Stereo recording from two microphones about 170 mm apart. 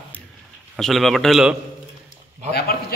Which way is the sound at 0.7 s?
Centre (ahead or behind).